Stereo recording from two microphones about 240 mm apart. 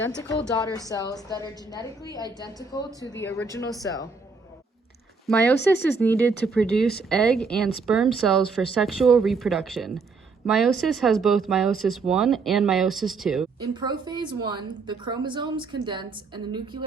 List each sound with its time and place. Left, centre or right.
0.1 s a woman's voice: centre
2.0 s a woman's voice: centre
2.7 s a woman's voice: centre
6.0 s speech: centre
13.6 s a woman's voice: centre